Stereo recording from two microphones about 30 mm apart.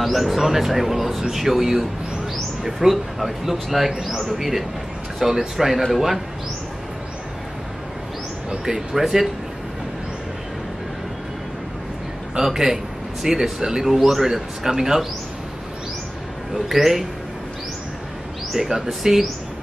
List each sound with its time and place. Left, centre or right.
0.0 s speech: centre
8.6 s speech: centre
12.4 s speech: centre
13.8 s speech: centre
14.2 s speech: centre
16.6 s speech: centre
18.8 s speech: centre